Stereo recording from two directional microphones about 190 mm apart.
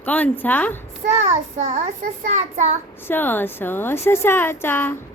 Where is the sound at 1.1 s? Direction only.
35° right (ahead or behind).